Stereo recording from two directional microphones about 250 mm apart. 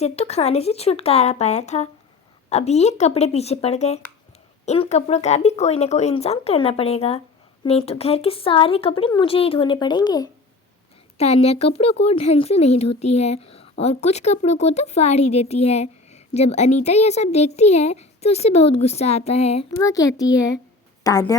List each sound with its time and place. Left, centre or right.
0.0 s speech: left
19.8 s a child's voice: centre